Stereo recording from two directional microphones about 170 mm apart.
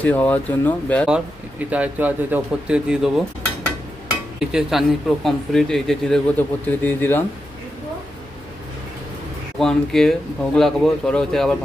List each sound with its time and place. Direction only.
0.0 s speech: 10° left (ahead or behind)
1.0 s speech: 5° right (ahead or behind)
4.4 s speech: centre (ahead or behind)
9.6 s speech: centre (ahead or behind)